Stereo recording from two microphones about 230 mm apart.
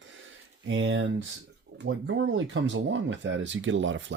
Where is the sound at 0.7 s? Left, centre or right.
Right.